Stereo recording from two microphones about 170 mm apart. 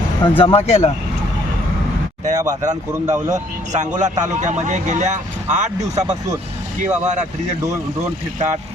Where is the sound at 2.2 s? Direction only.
20° right (ahead or behind).